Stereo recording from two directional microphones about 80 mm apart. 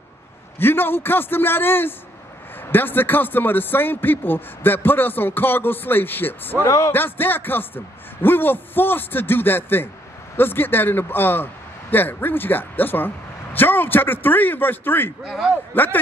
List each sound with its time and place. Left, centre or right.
0.6 s a man's voice: left
15.2 s a man's voice: centre
15.7 s a man's voice: left